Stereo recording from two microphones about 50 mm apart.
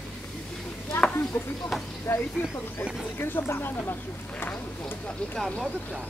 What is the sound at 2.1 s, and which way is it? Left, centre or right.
Speech, left.